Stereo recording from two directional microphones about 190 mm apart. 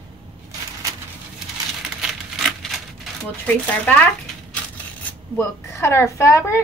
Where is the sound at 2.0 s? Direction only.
Centre (ahead or behind).